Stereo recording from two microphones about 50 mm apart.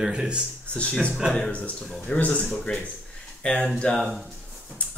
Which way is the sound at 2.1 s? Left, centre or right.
Left.